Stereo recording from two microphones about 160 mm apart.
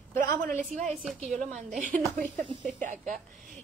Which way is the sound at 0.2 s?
55° right (ahead or behind).